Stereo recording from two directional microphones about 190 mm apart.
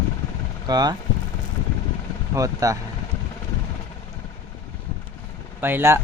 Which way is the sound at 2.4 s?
20° right (ahead or behind).